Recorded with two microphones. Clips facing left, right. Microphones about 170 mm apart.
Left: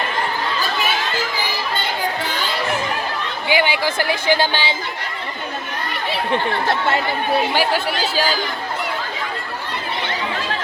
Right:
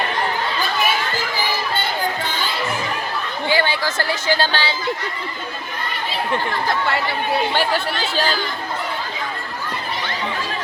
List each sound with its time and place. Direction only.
3.5 s speech: 15° left (ahead or behind)
8.1 s speech: 10° left (ahead or behind)